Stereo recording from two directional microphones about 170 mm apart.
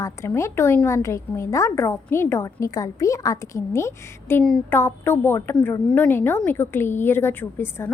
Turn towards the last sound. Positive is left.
turn(degrees=10)  # may be behind; listen again after turning